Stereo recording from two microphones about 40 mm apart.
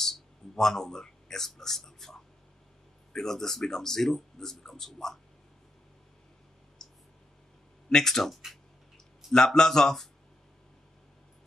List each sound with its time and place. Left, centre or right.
0.0 s a man's voice: centre
3.2 s speech: centre
6.8 s a sound: centre
7.9 s speech: centre